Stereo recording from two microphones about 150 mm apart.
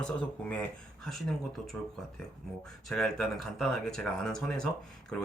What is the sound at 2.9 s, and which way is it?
Speech, 5° left (ahead or behind).